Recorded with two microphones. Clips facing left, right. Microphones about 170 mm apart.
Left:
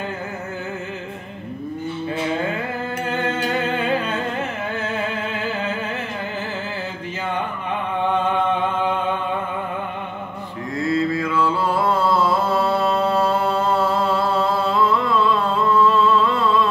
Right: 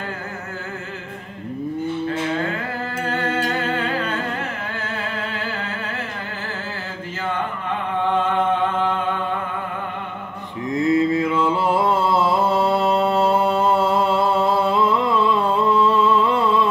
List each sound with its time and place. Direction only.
3.7 s music: 20° left (ahead or behind)
10.7 s mantra: 20° right (ahead or behind)